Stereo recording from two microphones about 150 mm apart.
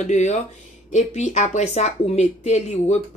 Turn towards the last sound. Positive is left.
turn(degrees=50)  # may be behind; listen again after turning